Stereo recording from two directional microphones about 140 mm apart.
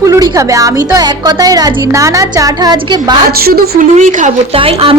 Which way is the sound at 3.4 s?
90° right.